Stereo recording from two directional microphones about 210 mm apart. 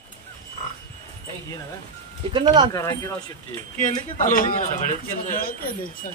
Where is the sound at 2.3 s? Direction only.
20° right (ahead or behind).